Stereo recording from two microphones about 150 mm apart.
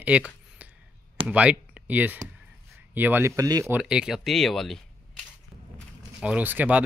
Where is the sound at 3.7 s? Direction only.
5° right (ahead or behind).